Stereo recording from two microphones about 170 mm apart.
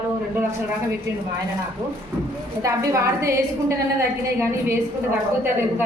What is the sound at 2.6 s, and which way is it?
A woman's voice, 20° right (ahead or behind).